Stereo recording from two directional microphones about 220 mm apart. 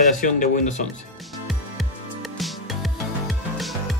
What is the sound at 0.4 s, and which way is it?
Speech, 35° left (ahead or behind).